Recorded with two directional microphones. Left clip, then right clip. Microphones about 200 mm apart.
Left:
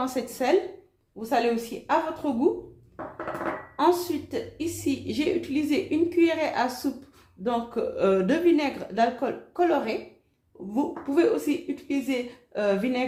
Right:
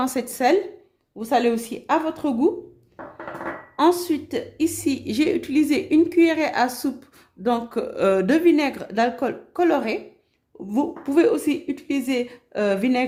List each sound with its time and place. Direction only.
0.0 s a woman's voice: 60° right (ahead or behind)
3.8 s a woman's voice: 60° right (ahead or behind)